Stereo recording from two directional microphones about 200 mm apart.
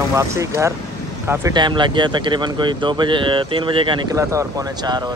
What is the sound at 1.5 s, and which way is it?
Speech, 25° right (ahead or behind).